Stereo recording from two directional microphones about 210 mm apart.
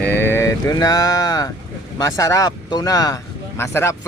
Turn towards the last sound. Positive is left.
turn(degrees=10)  # may be behind; listen again after turning